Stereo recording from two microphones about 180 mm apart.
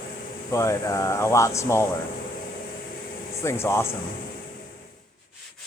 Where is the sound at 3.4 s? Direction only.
15° left (ahead or behind).